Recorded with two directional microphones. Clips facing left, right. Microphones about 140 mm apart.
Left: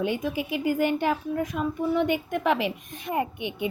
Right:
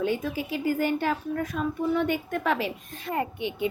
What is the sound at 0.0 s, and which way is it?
A woman's voice, 15° left (ahead or behind).